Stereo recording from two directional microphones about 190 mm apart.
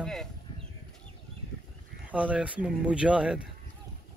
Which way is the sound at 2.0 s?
5° right (ahead or behind).